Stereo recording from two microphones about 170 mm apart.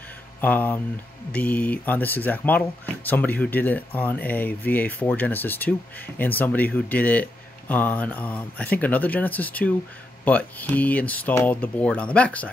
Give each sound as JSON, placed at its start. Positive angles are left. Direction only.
{"t": 0.4, "sound": "speech", "side_deg": 10}